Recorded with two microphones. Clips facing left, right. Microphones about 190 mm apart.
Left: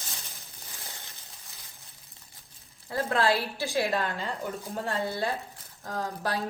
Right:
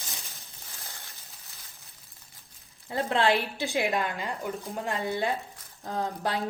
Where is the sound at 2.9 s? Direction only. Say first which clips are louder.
Right 1 dB; 20° right (ahead or behind).